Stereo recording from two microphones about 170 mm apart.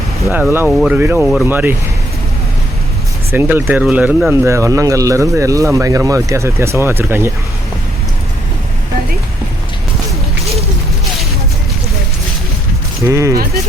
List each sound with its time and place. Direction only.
0.7 s speech: 5° right (ahead or behind)
3.3 s speech: 10° right (ahead or behind)
13.1 s speech: 15° right (ahead or behind)